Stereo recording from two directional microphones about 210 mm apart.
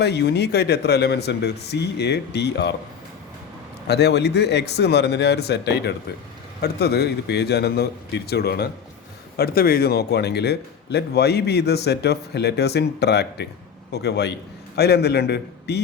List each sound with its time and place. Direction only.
0.0 s a man's voice: 50° left (ahead or behind)
3.8 s a man's voice: 50° left (ahead or behind)